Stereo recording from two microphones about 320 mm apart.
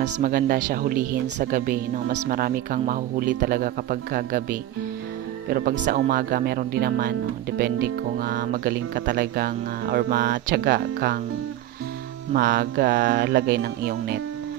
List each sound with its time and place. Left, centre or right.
0.0 s speech: right
12.4 s speech: right